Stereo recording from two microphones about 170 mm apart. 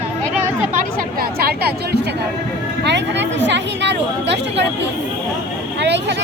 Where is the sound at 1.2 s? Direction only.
65° right (ahead or behind).